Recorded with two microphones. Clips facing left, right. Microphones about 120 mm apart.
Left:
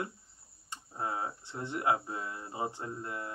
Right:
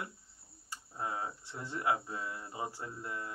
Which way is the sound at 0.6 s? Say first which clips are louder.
Left 2 dB; 25° left (ahead or behind).